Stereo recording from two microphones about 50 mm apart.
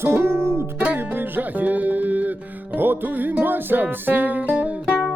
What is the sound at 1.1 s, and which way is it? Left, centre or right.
Music, right.